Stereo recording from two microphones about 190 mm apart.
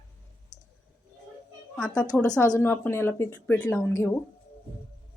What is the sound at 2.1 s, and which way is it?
A woman's voice, 5° left (ahead or behind).